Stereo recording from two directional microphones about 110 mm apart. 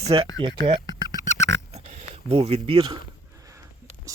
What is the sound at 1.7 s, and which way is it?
Oink, 80° right.